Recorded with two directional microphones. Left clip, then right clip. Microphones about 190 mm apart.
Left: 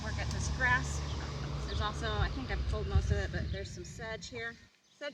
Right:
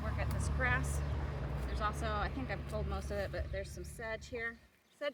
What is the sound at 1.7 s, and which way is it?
Speech, 40° right (ahead or behind).